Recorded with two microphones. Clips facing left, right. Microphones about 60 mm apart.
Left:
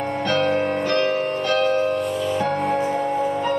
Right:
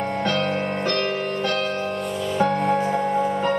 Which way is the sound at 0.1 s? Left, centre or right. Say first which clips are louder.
Left 5 dB; centre.